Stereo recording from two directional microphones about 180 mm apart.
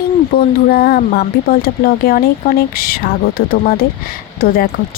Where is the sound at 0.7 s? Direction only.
60° left (ahead or behind).